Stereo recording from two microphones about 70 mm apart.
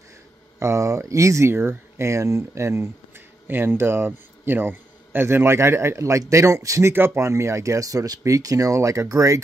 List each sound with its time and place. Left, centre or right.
0.6 s speech: right
1.5 s speech: right
3.4 s a man's voice: right
6.9 s speech: right